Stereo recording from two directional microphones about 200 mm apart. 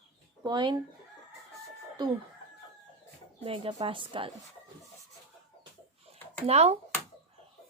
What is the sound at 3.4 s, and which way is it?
Speech, 30° right (ahead or behind).